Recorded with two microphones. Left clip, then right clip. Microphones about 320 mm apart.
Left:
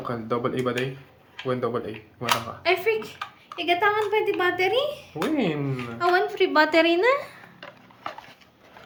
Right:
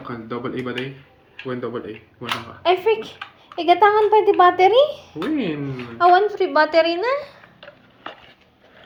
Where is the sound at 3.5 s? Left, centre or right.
Right.